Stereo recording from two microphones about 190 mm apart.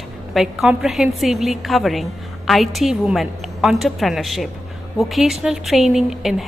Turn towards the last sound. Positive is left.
turn(degrees=0)  # may be behind; listen again after turning